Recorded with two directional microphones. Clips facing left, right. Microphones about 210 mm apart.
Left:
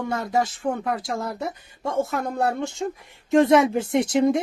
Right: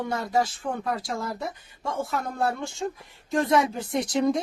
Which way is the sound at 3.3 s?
25° left (ahead or behind).